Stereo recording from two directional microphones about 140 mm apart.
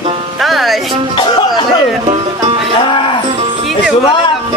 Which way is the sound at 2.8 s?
40° left (ahead or behind).